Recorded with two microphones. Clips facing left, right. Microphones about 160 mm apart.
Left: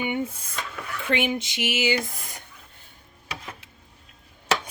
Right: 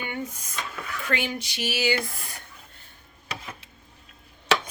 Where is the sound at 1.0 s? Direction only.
20° left (ahead or behind).